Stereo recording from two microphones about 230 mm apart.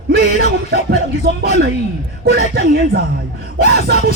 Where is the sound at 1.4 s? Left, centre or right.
Right.